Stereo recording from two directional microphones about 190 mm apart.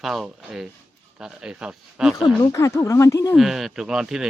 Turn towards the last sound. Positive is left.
turn(degrees=-5)  # may be behind; listen again after turning